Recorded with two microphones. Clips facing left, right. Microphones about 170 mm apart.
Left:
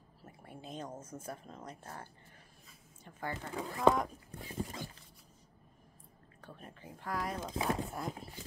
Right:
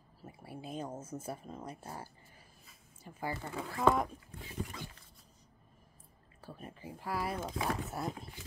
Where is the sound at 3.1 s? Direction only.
10° right (ahead or behind).